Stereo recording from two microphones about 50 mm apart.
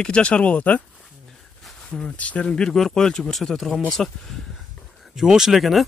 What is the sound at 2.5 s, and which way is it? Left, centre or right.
Speech, centre.